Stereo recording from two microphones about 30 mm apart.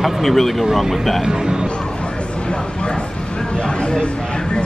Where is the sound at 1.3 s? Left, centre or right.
Right.